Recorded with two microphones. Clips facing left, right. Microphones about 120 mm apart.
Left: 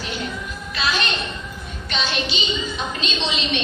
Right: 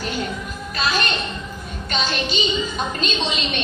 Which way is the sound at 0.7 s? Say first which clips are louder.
Right 1 dB; 45° right (ahead or behind).